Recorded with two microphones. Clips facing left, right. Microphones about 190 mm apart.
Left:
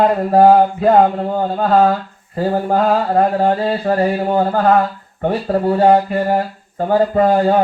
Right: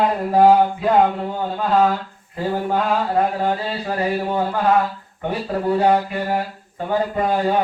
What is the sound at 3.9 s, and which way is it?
Mantra, 45° left (ahead or behind).